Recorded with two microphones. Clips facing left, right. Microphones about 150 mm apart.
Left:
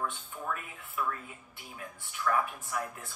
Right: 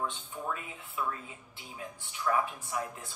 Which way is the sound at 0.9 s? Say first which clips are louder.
Left 1 dB; 25° right (ahead or behind).